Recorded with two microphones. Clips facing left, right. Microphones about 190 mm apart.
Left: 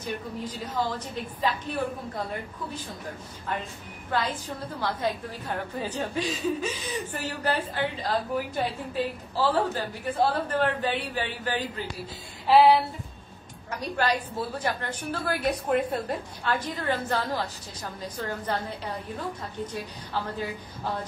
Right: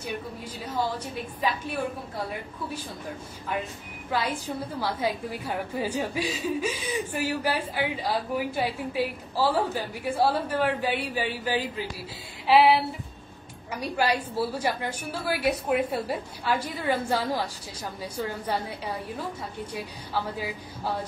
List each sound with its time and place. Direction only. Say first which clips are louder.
0.0 s a woman's voice: left 1 dB; 10° right (ahead or behind)
4.1 s a woman's voice: right 1 dB; 10° right (ahead or behind)
12.4 s a sound: left 1 dB; 5° right (ahead or behind)
13.7 s a woman's voice: right 1 dB; 10° right (ahead or behind)